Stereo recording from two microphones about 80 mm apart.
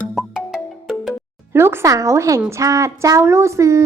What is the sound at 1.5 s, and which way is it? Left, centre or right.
A woman's voice, right.